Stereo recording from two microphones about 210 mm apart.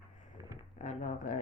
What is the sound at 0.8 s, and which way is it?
Speech, 35° left (ahead or behind).